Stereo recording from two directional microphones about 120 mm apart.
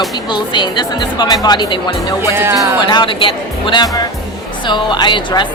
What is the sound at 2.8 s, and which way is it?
Speech, 40° left (ahead or behind).